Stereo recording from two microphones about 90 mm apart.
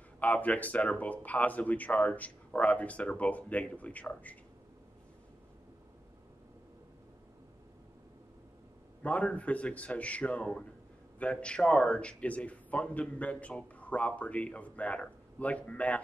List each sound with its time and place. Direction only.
0.2 s a man's voice: 15° left (ahead or behind)
9.0 s a man's voice: 15° left (ahead or behind)